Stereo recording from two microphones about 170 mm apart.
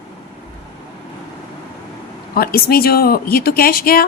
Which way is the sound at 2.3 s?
65° left (ahead or behind).